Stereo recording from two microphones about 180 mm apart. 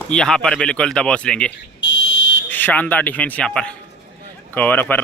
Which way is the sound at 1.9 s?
90° left.